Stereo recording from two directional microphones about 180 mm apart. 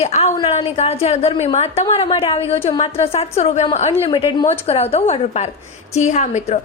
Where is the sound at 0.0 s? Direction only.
35° left (ahead or behind).